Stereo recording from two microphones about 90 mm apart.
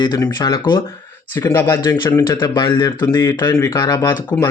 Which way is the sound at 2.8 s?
40° left (ahead or behind).